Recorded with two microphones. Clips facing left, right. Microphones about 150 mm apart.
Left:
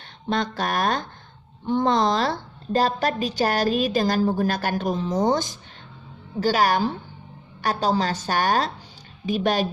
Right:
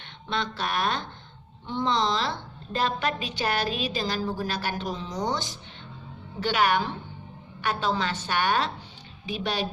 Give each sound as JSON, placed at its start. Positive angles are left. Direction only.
{"t": 0.0, "sound": "a woman's voice", "side_deg": 45}